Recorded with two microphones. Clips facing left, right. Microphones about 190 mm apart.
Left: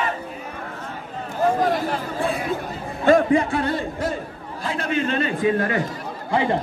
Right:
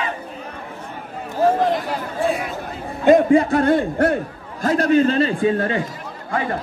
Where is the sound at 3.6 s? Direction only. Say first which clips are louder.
Right 7 dB; 55° right (ahead or behind).